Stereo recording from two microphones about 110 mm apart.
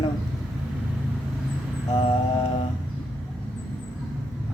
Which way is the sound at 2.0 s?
65° left (ahead or behind).